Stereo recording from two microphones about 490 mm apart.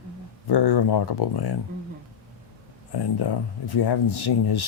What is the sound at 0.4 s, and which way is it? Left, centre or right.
Speech, left.